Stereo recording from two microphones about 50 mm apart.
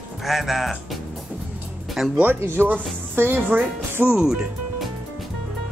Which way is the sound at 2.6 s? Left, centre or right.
Right.